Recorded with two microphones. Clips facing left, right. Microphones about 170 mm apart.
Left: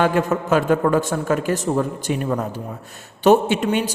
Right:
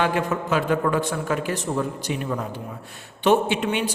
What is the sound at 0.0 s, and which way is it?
A man's voice, 45° left (ahead or behind).